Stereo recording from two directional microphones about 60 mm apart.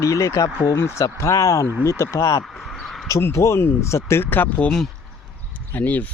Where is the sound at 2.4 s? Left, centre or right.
Centre.